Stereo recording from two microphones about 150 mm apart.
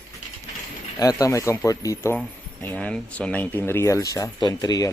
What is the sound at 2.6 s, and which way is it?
Speech, 10° left (ahead or behind).